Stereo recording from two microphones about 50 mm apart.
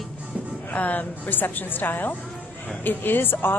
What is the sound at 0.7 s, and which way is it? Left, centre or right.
A woman's voice, left.